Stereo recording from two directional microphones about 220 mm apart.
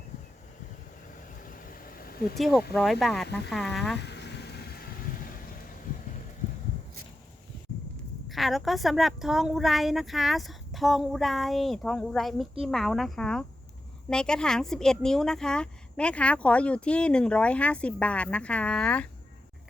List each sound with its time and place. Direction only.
1.4 s vehicle: 40° left (ahead or behind)
2.4 s speech: centre (ahead or behind)
4.0 s stir: 50° left (ahead or behind)
8.3 s speech: centre (ahead or behind)